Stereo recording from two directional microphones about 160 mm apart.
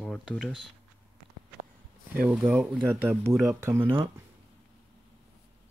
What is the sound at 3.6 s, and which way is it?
Speech, 15° right (ahead or behind).